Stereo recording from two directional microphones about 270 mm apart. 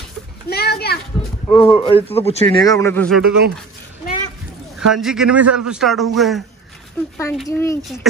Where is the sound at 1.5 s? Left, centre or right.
Centre.